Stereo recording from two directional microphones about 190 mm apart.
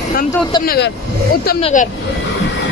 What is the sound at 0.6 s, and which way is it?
Speech, 50° left (ahead or behind).